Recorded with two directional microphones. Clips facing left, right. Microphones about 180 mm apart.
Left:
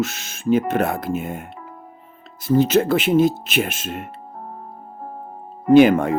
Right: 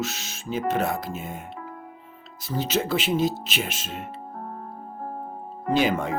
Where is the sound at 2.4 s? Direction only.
50° left (ahead or behind).